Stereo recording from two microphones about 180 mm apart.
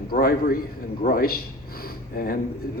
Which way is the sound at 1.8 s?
55° left (ahead or behind).